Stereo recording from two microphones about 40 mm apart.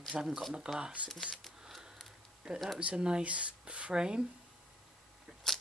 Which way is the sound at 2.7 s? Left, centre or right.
Right.